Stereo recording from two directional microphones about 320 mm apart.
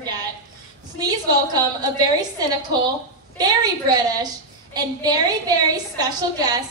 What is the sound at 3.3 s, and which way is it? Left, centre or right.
Speech, centre.